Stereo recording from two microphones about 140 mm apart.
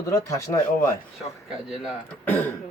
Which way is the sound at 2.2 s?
15° left (ahead or behind).